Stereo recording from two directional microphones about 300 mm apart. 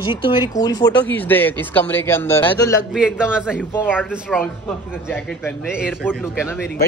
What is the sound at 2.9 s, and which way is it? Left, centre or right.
Speech, centre.